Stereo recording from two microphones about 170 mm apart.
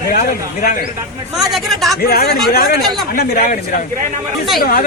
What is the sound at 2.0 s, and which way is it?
Speech, 60° left (ahead or behind).